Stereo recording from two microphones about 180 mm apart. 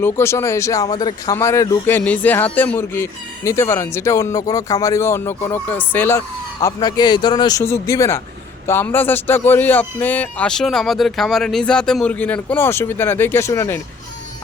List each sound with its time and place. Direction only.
0.0 s speech: 15° left (ahead or behind)